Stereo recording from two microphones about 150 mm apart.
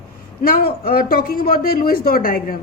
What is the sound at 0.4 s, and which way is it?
Speech, 80° left.